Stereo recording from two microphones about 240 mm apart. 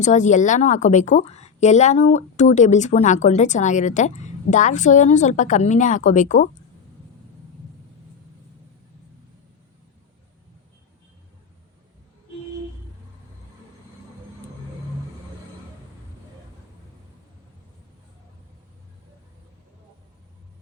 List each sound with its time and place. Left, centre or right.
0.0 s a woman's voice: left